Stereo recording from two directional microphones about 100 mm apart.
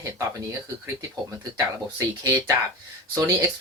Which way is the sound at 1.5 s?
40° right (ahead or behind).